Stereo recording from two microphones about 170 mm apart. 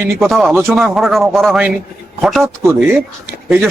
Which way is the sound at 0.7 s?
Centre (ahead or behind).